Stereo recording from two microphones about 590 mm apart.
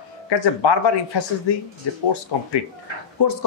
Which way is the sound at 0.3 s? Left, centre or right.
Left.